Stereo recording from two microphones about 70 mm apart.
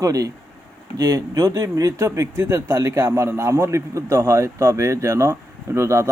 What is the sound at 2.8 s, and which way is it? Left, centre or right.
A man's voice, right.